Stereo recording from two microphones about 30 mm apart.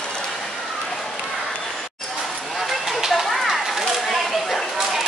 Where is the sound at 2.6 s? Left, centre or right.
Centre.